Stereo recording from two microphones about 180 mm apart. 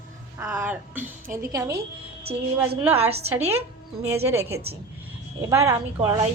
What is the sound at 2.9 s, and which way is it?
Speech, 35° right (ahead or behind).